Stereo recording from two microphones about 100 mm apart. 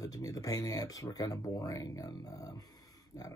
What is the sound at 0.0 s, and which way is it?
Speech, 35° left (ahead or behind).